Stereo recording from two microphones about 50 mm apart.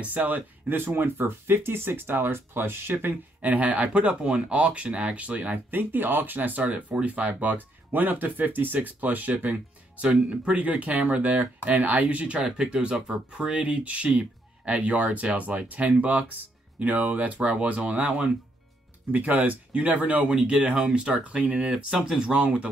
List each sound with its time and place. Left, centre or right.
0.0 s speech: right
3.4 s speech: right
21.7 s speech: centre